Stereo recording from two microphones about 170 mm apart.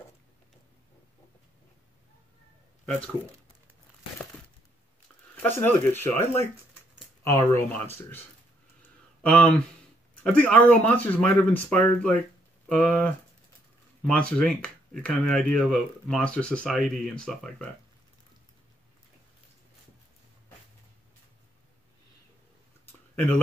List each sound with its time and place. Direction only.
5.3 s speech: 10° left (ahead or behind)
9.2 s speech: 5° left (ahead or behind)
23.1 s speech: 10° left (ahead or behind)